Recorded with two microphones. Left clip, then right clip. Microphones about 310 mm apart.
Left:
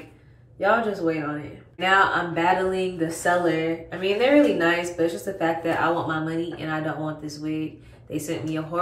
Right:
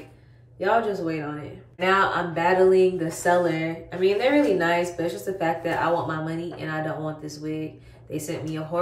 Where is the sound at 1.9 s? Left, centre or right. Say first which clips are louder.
Left 4 dB; centre.